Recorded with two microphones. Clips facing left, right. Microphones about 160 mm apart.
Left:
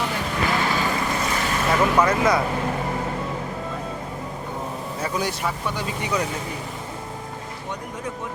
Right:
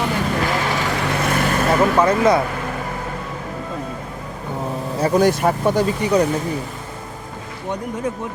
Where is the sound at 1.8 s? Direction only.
30° right (ahead or behind).